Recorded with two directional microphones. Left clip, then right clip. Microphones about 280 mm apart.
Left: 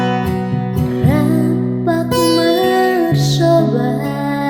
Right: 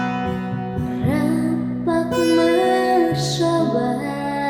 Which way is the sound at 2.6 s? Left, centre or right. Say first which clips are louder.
Left 4 dB; left.